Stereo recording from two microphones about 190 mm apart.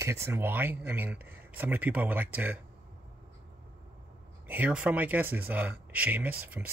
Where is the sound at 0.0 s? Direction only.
15° right (ahead or behind).